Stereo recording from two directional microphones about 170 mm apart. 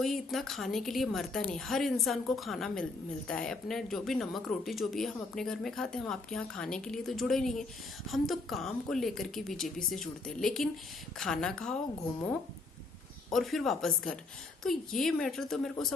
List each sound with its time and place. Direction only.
0.0 s speech: centre (ahead or behind)
13.3 s speech: centre (ahead or behind)